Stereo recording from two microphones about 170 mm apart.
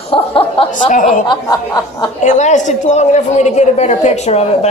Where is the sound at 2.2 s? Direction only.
45° left (ahead or behind).